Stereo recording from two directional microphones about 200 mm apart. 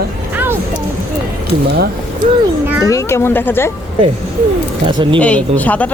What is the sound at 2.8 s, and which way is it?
Speech, 15° left (ahead or behind).